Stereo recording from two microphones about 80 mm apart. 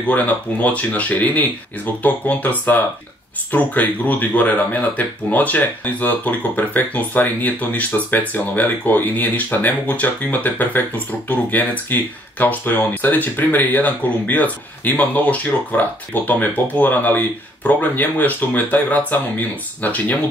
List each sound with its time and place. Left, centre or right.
0.0 s speech: centre
3.5 s speech: left